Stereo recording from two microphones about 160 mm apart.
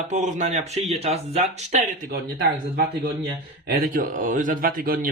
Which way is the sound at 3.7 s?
60° right (ahead or behind).